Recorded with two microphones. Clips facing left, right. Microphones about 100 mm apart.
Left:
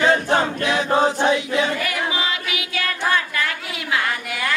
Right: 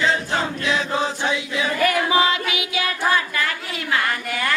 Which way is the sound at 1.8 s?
40° right (ahead or behind).